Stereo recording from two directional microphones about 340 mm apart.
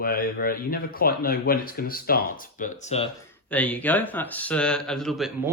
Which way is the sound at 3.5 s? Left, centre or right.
Centre.